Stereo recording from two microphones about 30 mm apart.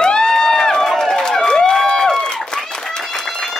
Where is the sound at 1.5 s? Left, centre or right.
Centre.